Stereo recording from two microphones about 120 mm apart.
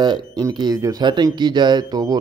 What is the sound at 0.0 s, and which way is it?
Speech, 40° right (ahead or behind).